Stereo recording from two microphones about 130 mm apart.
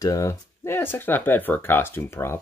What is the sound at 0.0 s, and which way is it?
Speech, 25° left (ahead or behind).